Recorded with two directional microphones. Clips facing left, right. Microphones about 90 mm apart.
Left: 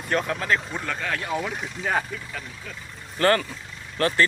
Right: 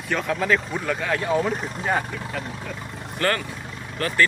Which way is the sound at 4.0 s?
40° left (ahead or behind).